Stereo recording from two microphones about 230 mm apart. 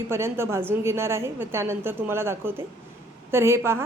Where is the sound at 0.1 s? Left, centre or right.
Centre.